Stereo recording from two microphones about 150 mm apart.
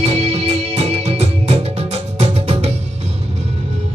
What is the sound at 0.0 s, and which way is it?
Music, 45° right (ahead or behind).